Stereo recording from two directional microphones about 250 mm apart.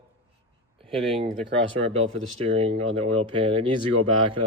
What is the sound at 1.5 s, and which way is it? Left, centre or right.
Speech, right.